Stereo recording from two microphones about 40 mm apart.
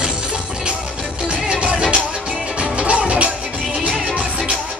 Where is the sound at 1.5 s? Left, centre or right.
Right.